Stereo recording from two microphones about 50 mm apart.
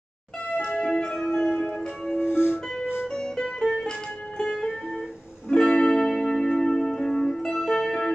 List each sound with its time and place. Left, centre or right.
0.7 s music: centre
1.4 s church bell: left
2.1 s music: left
3.1 s music: centre